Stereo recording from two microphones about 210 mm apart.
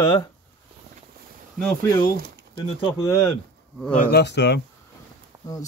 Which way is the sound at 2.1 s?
50° right (ahead or behind).